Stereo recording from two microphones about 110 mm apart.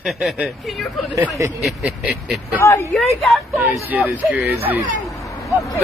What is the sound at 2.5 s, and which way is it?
Speech, 25° left (ahead or behind).